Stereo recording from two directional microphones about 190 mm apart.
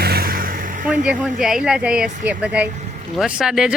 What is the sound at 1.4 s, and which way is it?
Speech, 5° right (ahead or behind).